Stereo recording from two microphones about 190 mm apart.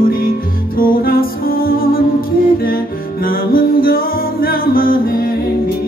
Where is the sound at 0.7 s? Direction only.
50° left (ahead or behind).